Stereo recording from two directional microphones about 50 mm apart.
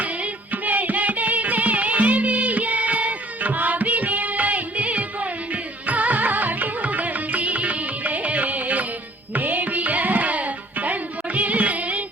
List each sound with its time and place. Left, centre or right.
0.0 s music: right